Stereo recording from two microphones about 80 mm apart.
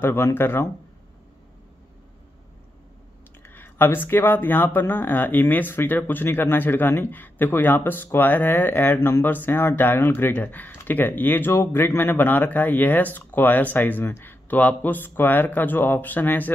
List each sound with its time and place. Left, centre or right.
0.0 s speech: left
3.4 s speech: left